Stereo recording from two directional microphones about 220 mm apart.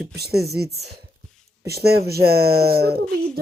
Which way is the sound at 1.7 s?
45° right (ahead or behind).